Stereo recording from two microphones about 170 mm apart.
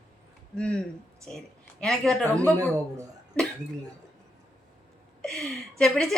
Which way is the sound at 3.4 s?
5° left (ahead or behind).